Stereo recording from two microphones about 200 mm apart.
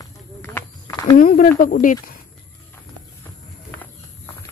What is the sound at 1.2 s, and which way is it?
Speech, 45° left (ahead or behind).